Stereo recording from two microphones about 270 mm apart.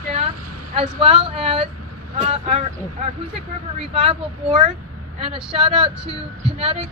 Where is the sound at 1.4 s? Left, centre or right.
Right.